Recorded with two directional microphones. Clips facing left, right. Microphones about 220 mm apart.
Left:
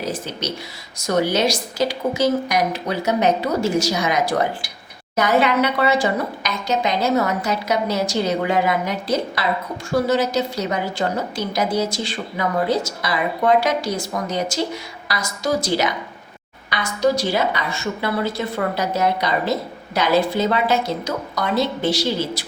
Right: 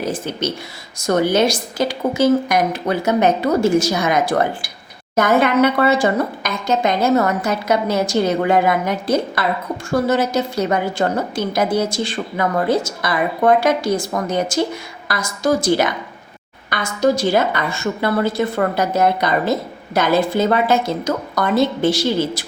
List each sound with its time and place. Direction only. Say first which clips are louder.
0.0 s a woman's voice: right 4 dB; 50° right (ahead or behind)